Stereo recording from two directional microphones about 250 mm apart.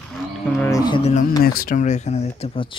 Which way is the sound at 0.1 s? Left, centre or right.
Centre.